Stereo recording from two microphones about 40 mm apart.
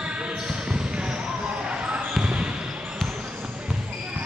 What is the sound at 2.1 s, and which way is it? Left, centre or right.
Basketball bounce, right.